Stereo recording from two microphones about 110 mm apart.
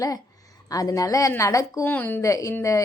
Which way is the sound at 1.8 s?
15° left (ahead or behind).